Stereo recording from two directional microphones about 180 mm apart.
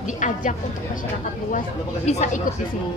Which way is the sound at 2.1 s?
40° left (ahead or behind).